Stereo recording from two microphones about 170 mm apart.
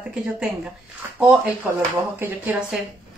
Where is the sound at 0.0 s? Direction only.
5° right (ahead or behind).